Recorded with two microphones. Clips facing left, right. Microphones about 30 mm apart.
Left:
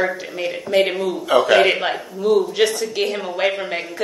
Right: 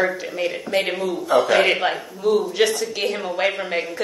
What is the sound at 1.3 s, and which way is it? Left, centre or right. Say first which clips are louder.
Speech: left 2 dB; left.